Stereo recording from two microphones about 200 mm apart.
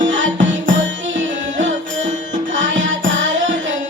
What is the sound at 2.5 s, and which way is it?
Music, 70° right (ahead or behind).